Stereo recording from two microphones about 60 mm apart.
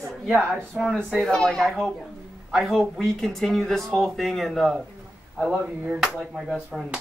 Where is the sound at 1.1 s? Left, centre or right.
Centre.